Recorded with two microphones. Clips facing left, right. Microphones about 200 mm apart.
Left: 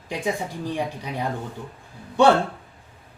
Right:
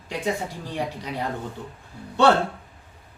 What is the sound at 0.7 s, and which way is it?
Speech, 15° left (ahead or behind).